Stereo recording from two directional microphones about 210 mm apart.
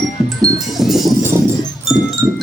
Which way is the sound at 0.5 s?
Centre (ahead or behind).